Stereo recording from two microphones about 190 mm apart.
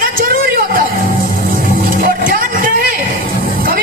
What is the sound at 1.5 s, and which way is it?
Vehicle, 45° right (ahead or behind).